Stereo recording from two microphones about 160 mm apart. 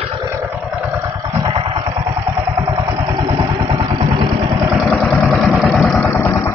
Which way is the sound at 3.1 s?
25° right (ahead or behind).